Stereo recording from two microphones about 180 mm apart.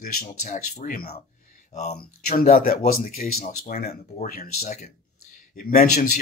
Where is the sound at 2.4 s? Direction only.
55° left (ahead or behind).